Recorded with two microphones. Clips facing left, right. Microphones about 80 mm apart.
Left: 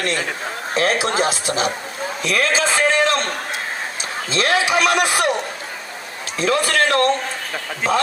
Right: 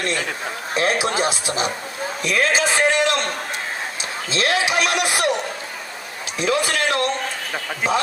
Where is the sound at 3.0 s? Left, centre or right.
Left.